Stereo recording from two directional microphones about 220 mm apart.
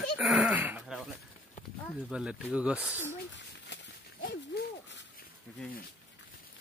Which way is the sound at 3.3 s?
55° left (ahead or behind).